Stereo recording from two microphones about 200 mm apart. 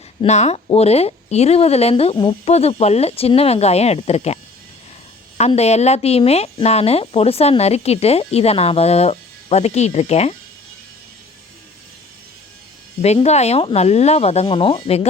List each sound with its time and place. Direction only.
0.2 s speech: 35° left (ahead or behind)
5.4 s speech: 30° left (ahead or behind)
13.0 s speech: 30° left (ahead or behind)